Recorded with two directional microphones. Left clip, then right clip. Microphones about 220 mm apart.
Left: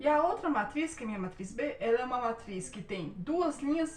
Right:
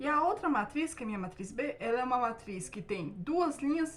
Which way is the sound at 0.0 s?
20° right (ahead or behind).